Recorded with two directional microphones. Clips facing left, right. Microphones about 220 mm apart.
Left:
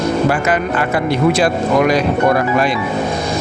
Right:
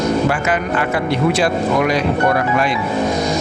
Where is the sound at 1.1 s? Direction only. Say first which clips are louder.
Left 3 dB; 40° left (ahead or behind).